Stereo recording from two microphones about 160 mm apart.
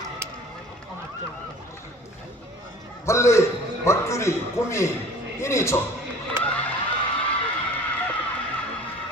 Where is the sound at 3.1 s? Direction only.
20° left (ahead or behind).